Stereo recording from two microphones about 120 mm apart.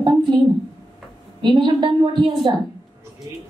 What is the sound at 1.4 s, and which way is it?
A woman's voice, 40° right (ahead or behind).